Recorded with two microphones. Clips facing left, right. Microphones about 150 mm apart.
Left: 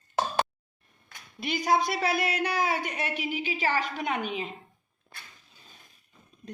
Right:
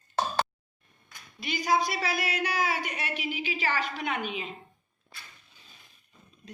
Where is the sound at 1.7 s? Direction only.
55° left (ahead or behind).